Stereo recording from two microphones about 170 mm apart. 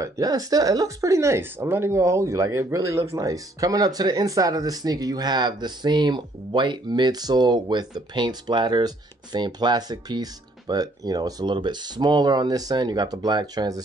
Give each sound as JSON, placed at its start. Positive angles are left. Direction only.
{"t": 0.0, "sound": "speech", "side_deg": -20}